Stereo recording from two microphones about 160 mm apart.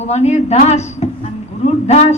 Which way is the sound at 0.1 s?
45° left (ahead or behind).